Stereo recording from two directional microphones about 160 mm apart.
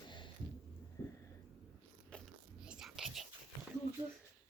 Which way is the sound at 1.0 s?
20° left (ahead or behind).